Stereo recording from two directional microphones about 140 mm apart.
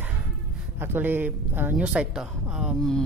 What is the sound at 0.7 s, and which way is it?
A woman's voice, 15° right (ahead or behind).